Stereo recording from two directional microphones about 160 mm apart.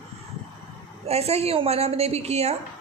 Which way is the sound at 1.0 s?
40° right (ahead or behind).